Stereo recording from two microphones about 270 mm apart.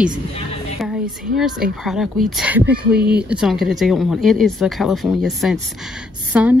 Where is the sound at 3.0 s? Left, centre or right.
Right.